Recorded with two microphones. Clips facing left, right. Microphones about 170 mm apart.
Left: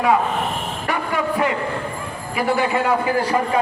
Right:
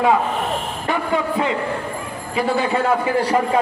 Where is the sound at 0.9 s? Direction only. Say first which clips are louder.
Right 2 dB; 25° right (ahead or behind).